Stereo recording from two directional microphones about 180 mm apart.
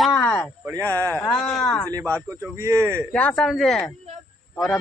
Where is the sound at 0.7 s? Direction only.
15° right (ahead or behind).